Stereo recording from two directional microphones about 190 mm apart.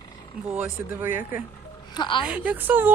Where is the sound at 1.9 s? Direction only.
25° left (ahead or behind).